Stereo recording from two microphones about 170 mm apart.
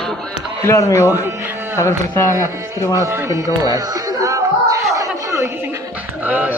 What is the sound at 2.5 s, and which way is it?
Speech, 15° right (ahead or behind).